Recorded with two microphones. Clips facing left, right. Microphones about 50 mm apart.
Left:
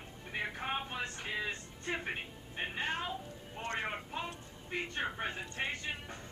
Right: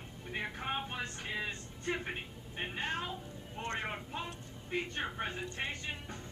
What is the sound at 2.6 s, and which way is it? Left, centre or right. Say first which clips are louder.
A woman's voice: left 1 dB; centre.